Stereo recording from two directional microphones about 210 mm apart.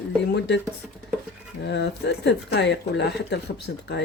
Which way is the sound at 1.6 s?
55° left (ahead or behind).